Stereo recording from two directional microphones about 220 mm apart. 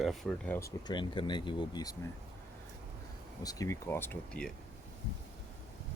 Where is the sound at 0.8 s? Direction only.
20° left (ahead or behind).